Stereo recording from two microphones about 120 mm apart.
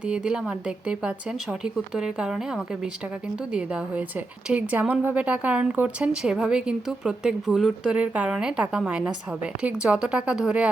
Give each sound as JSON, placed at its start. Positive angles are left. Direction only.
{"t": 0.1, "sound": "a woman's voice", "side_deg": -10}
{"t": 4.4, "sound": "a woman's voice", "side_deg": -10}